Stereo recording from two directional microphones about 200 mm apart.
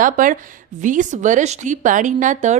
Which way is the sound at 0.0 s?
40° right (ahead or behind).